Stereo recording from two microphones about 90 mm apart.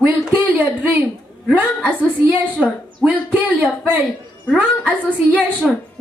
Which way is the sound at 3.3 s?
15° right (ahead or behind).